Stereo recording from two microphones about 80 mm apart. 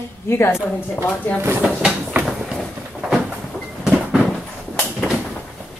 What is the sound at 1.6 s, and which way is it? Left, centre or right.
Train, centre.